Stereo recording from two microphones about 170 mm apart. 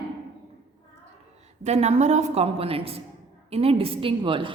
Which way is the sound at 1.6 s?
40° right (ahead or behind).